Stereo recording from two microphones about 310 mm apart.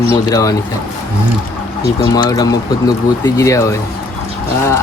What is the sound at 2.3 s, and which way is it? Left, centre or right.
Speech, centre.